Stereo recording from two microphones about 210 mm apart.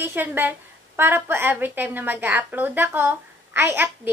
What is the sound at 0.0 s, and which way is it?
A woman's voice, 10° right (ahead or behind).